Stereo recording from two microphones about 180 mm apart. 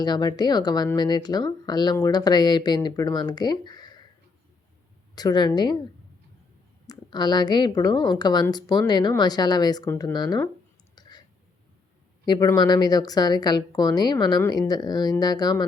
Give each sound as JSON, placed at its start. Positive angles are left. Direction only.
{"t": 0.0, "sound": "speech", "side_deg": 25}
{"t": 5.1, "sound": "speech", "side_deg": 25}
{"t": 6.8, "sound": "speech", "side_deg": 25}
{"t": 12.2, "sound": "speech", "side_deg": 20}